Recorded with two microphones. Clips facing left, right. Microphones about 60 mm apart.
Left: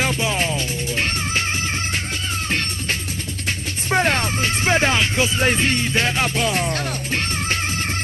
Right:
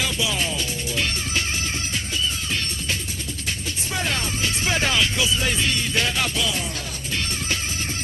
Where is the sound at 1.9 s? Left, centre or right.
Left.